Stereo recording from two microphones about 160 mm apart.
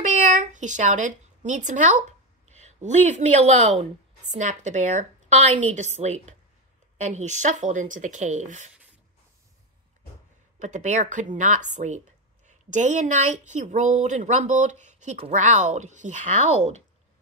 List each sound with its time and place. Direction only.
0.0 s a sound: 50° right (ahead or behind)
2.5 s speech: 45° right (ahead or behind)
10.6 s speech: 50° right (ahead or behind)